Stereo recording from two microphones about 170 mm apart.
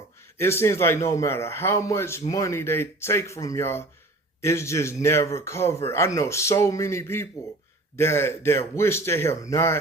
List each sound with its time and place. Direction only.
0.3 s a man's voice: 15° left (ahead or behind)